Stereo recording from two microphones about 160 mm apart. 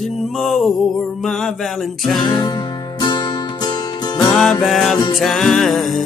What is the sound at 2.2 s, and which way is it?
Music, 25° left (ahead or behind).